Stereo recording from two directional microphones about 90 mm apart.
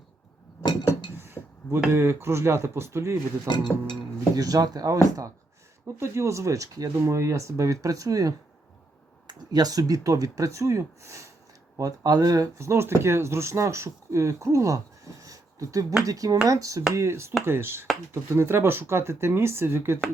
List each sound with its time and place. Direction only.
1.1 s a sound: 30° right (ahead or behind)
1.9 s speech: 30° right (ahead or behind)
3.4 s speech: 55° left (ahead or behind)
4.4 s speech: 45° right (ahead or behind)
6.0 s speech: 35° right (ahead or behind)
12.5 s speech: 30° right (ahead or behind)